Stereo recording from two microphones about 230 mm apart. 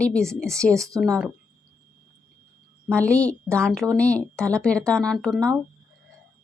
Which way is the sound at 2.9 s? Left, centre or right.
Centre.